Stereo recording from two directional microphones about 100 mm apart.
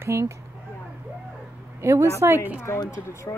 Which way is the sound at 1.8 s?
30° right (ahead or behind).